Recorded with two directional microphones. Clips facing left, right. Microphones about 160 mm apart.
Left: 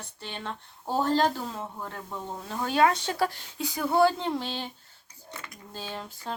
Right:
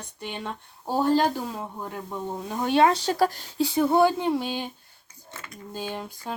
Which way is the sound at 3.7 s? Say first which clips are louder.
Right 2 dB; 25° right (ahead or behind).